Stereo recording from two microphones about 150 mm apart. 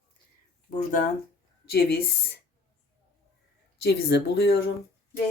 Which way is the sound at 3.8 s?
90° left.